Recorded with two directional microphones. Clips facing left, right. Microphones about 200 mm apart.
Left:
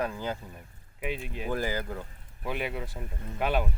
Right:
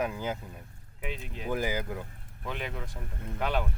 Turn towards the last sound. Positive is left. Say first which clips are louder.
# left 2 dB
turn(degrees=10)  # may be behind; listen again after turning